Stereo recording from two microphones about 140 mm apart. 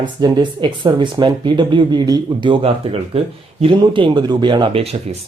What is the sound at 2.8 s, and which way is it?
Speech, 40° right (ahead or behind).